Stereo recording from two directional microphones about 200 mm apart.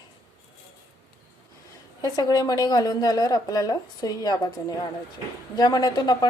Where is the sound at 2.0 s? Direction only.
20° left (ahead or behind).